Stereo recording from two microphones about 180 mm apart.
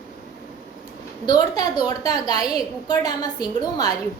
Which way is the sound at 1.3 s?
20° left (ahead or behind).